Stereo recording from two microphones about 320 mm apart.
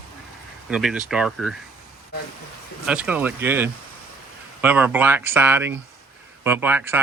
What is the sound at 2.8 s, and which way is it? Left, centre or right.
Speech, centre.